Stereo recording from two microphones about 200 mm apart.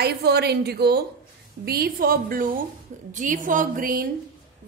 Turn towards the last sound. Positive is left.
turn(degrees=-45)  # may be behind; listen again after turning